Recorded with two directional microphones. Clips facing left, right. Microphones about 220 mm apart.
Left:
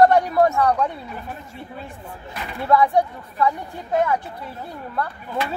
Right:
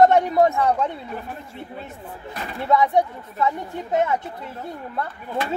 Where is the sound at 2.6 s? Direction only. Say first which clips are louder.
Left 1 dB; 20° right (ahead or behind).